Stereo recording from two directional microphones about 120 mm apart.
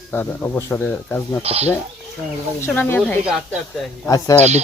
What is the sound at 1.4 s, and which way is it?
Speech, 60° right (ahead or behind).